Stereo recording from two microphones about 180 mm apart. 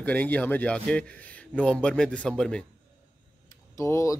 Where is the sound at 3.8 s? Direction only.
15° left (ahead or behind).